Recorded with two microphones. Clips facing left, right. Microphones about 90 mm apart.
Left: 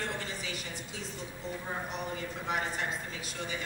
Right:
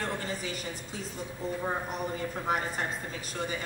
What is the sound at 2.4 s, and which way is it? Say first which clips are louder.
A woman's voice: right 2 dB; 45° right (ahead or behind).